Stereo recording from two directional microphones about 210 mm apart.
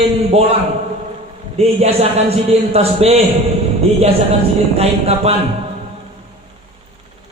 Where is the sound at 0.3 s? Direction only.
30° right (ahead or behind).